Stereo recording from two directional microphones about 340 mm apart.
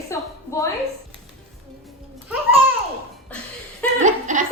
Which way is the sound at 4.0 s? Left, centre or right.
Right.